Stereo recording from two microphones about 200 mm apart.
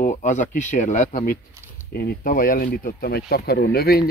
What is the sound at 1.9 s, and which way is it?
Speech, 50° left (ahead or behind).